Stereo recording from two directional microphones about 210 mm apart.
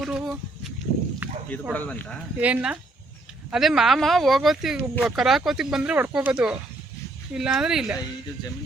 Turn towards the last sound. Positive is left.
turn(degrees=-5)  # may be behind; listen again after turning